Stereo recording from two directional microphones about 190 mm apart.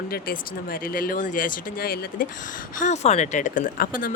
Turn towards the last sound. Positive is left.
turn(degrees=45)  # may be behind; listen again after turning